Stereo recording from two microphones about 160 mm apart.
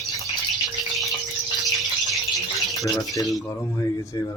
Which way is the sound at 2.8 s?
20° left (ahead or behind).